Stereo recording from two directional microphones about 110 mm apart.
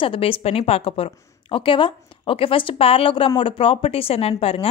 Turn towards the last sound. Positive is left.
turn(degrees=60)  # may be behind; listen again after turning